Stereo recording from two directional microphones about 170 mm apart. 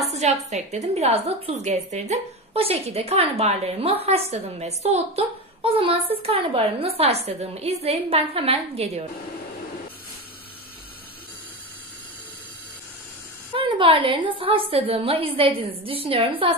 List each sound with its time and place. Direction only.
0.0 s a sound: 40° right (ahead or behind)
0.5 s a woman's voice: 45° right (ahead or behind)
13.6 s a woman's voice: 30° right (ahead or behind)